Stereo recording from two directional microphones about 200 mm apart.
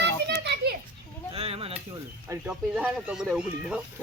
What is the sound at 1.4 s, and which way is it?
Speech, 30° right (ahead or behind).